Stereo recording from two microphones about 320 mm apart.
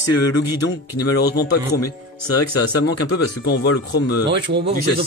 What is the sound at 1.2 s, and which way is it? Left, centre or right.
Speech, left.